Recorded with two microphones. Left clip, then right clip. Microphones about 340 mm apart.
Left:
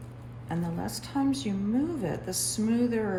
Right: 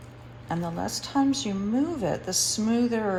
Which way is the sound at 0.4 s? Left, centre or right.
Centre.